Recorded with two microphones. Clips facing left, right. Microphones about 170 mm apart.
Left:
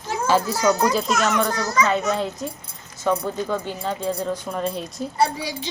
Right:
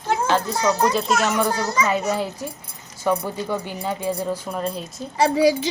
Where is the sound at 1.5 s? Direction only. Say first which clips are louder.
Even; 30° right (ahead or behind).